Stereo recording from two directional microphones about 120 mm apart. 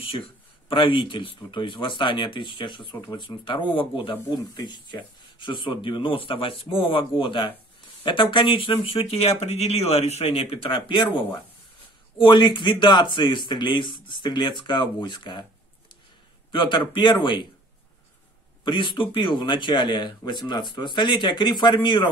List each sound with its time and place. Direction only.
0.7 s speech: 45° left (ahead or behind)
16.5 s speech: 45° left (ahead or behind)
18.6 s speech: 40° left (ahead or behind)